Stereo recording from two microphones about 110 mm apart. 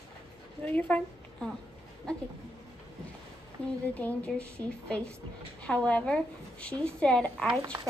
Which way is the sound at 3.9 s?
15° left (ahead or behind).